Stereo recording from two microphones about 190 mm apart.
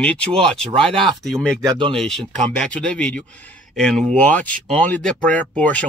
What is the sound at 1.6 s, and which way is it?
Speech, 25° right (ahead or behind).